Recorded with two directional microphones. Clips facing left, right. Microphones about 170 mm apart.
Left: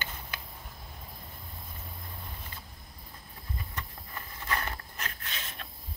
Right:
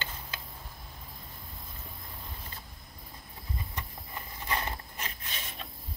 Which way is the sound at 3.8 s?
15° right (ahead or behind).